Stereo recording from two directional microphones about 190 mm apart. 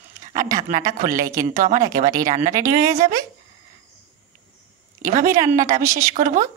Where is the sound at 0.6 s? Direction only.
40° right (ahead or behind).